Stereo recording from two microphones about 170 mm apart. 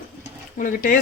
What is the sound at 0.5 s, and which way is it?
Speech, 55° left (ahead or behind).